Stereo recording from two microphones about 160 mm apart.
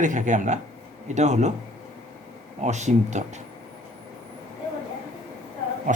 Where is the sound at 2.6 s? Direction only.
45° right (ahead or behind).